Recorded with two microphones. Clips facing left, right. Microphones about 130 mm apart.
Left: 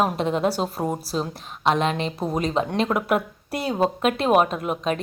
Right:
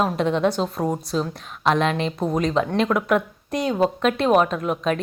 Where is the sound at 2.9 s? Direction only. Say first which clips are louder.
Right 2 dB; 25° left (ahead or behind).